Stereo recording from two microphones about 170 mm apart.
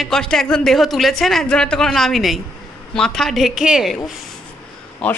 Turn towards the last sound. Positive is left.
turn(degrees=5)  # may be behind; listen again after turning